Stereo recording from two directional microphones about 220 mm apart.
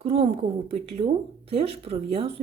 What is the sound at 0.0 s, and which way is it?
A woman's voice, 25° right (ahead or behind).